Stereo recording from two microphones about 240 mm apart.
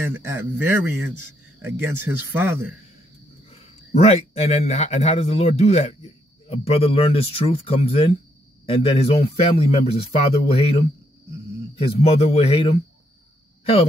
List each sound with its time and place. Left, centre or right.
0.7 s speech: centre
3.9 s a man's voice: left
11.8 s a man's voice: left